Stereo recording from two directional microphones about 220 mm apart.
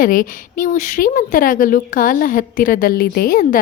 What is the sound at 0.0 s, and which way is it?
Speech, 40° left (ahead or behind).